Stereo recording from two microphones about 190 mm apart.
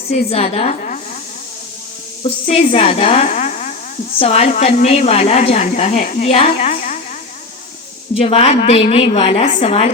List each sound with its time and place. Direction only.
0.1 s a woman's voice: 35° left (ahead or behind)
2.5 s a woman's voice: 30° left (ahead or behind)
6.0 s a woman's voice: 45° left (ahead or behind)
8.2 s a woman's voice: 30° left (ahead or behind)